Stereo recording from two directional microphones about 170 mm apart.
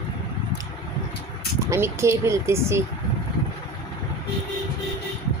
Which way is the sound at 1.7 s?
15° right (ahead or behind).